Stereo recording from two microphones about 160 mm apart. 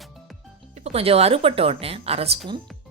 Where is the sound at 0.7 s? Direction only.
40° right (ahead or behind).